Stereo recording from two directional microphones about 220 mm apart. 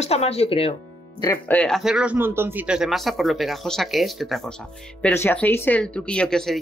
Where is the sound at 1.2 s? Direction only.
10° left (ahead or behind).